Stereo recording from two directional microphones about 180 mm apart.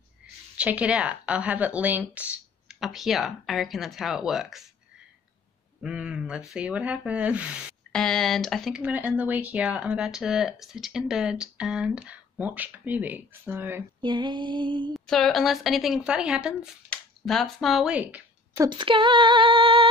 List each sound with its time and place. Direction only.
0.6 s speech: 5° right (ahead or behind)
5.8 s speech: 5° right (ahead or behind)
14.0 s female singing: 25° right (ahead or behind)
15.0 s speech: centre (ahead or behind)
18.7 s female singing: 25° right (ahead or behind)